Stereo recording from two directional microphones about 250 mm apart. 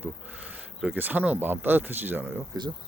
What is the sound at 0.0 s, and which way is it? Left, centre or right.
Speech, centre.